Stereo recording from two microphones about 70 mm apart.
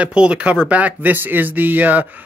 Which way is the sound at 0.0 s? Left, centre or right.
Centre.